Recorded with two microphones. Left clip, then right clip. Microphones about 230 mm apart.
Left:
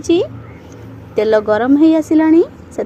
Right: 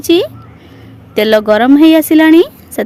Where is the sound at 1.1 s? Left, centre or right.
Right.